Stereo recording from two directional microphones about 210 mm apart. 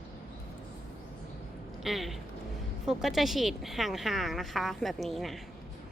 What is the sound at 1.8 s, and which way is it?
Speech, centre (ahead or behind).